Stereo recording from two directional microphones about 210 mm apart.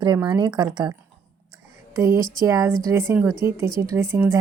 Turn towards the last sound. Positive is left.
turn(degrees=-10)  # may be behind; listen again after turning